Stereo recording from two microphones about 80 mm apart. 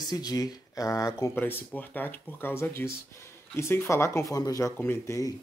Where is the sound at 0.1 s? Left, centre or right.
Left.